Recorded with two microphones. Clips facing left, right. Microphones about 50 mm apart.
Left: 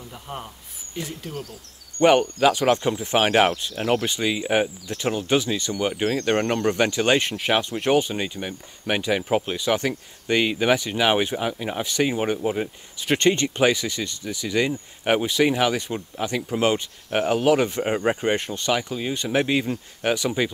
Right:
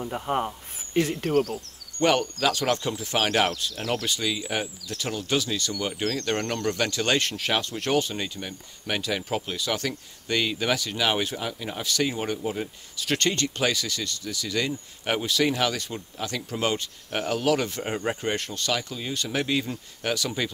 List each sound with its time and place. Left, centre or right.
0.0 s speech: right
0.9 s speech: right
1.3 s speech: right
2.0 s speech: centre